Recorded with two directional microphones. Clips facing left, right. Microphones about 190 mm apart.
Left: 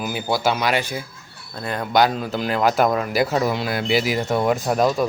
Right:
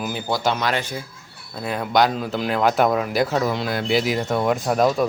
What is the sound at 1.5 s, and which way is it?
Speech, 5° right (ahead or behind).